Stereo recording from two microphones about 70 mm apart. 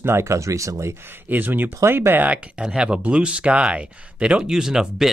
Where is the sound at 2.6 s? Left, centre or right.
Centre.